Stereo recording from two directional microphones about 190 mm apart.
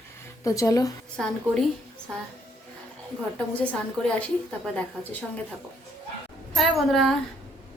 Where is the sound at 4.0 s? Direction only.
5° left (ahead or behind).